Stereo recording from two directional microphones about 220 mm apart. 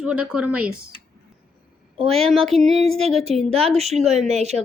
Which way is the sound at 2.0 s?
Centre (ahead or behind).